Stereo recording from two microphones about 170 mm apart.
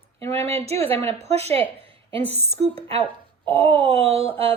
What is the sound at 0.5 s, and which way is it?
A woman's voice, 35° right (ahead or behind).